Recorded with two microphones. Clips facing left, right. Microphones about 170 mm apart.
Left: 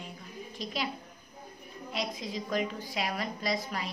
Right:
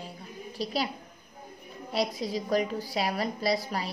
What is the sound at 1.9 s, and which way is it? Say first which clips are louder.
A woman's voice: right 6 dB; 35° right (ahead or behind).